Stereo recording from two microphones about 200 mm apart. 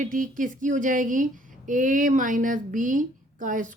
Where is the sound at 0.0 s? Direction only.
40° right (ahead or behind).